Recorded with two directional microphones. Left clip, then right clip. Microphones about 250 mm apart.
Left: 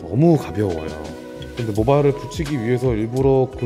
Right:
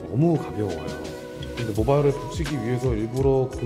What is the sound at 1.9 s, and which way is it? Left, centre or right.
Speech, left.